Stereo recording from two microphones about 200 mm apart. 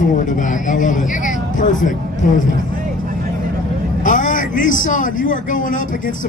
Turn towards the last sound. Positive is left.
turn(degrees=40)  # may be behind; listen again after turning